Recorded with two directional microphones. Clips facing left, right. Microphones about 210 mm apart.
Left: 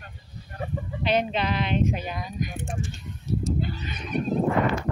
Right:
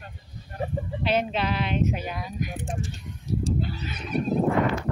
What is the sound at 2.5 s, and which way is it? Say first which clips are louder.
Speech: even; 35° right (ahead or behind).